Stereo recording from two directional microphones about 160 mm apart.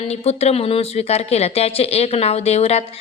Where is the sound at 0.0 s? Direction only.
40° left (ahead or behind).